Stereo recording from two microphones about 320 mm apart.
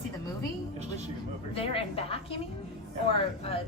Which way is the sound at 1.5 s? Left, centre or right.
Centre.